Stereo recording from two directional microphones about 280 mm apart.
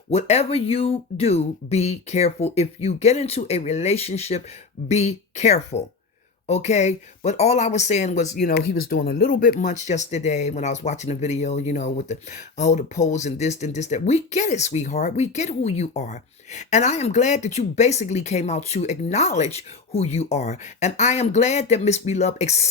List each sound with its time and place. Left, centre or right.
0.1 s speech: left